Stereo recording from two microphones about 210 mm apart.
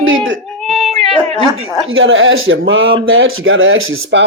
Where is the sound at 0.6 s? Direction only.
Centre (ahead or behind).